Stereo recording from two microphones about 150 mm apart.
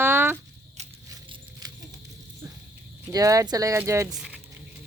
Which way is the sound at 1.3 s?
25° right (ahead or behind).